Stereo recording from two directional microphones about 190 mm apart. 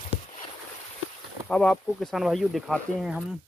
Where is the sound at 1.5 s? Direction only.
5° left (ahead or behind).